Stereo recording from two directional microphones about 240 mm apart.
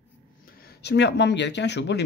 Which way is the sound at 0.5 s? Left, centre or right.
Left.